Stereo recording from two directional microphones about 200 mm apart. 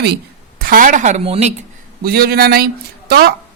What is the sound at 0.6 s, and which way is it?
Speech, 45° right (ahead or behind).